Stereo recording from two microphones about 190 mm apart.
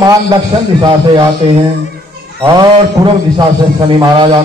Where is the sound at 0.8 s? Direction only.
25° right (ahead or behind).